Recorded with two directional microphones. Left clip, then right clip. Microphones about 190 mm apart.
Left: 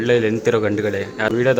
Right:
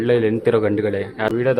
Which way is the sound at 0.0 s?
10° right (ahead or behind).